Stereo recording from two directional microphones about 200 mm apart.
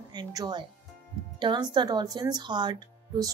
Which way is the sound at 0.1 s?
20° right (ahead or behind).